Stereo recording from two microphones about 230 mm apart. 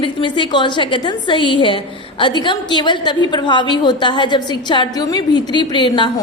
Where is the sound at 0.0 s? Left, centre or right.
Left.